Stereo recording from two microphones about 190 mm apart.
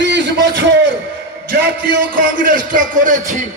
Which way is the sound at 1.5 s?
45° right (ahead or behind).